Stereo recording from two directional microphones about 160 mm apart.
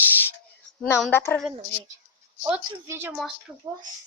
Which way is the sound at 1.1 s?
10° left (ahead or behind).